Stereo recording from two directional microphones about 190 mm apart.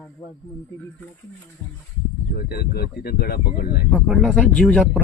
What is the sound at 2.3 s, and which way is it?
Speech, 55° left (ahead or behind).